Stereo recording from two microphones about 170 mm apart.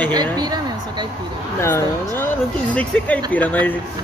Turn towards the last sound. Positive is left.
turn(degrees=10)  # may be behind; listen again after turning